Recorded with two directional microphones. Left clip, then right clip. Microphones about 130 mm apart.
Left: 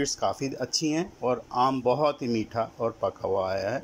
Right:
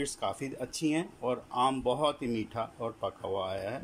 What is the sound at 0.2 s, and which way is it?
Speech, 5° left (ahead or behind).